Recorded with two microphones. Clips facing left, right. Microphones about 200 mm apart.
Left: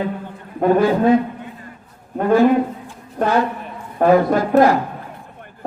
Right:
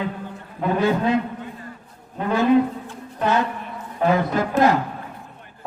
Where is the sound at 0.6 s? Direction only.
50° left (ahead or behind).